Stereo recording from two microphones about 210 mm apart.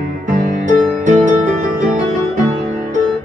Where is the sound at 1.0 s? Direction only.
35° right (ahead or behind).